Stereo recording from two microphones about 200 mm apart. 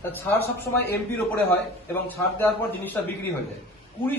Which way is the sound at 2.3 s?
10° left (ahead or behind).